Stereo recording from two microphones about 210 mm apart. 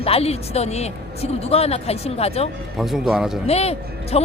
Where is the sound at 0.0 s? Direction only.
30° left (ahead or behind).